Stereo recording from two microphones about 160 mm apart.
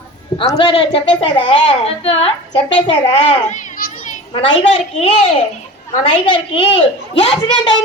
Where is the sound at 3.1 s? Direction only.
50° left (ahead or behind).